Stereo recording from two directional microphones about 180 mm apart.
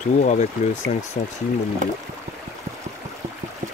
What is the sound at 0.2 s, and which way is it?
Speech, 40° left (ahead or behind).